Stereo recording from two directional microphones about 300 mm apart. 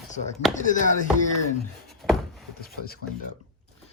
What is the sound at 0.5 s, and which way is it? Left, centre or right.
Speech, left.